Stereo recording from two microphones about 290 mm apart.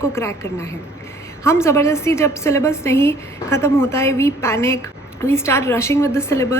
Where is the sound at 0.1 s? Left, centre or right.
Centre.